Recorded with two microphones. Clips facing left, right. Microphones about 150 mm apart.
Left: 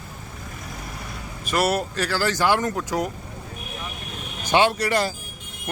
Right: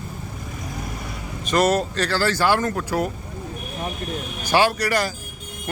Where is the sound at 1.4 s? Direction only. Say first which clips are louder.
Right 3 dB; 10° left (ahead or behind).